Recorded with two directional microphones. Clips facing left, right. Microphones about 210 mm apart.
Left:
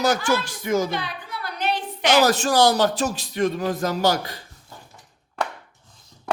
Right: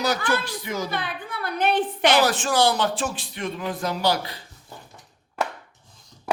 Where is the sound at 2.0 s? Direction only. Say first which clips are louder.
Left 4 dB; 45° left (ahead or behind).